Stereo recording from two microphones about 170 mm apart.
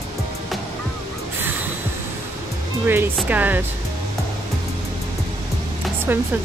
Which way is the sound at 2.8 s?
10° right (ahead or behind).